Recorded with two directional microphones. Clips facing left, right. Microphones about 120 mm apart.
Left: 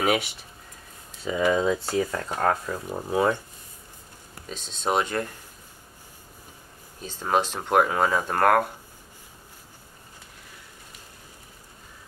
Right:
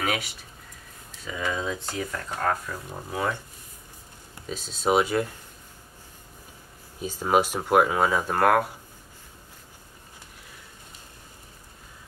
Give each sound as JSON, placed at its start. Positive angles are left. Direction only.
{"t": 0.0, "sound": "speech", "side_deg": 20}
{"t": 4.5, "sound": "speech", "side_deg": -5}
{"t": 7.0, "sound": "speech", "side_deg": -10}